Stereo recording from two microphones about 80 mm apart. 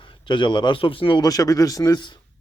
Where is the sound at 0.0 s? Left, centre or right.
Left.